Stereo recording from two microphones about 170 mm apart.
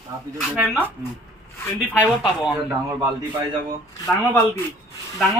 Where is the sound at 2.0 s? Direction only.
Centre (ahead or behind).